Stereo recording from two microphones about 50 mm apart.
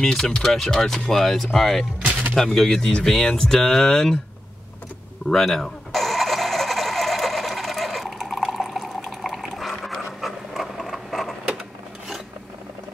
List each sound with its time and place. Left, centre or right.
0.0 s speech: centre
2.0 s music: right
2.3 s speech: centre
5.3 s a sound: centre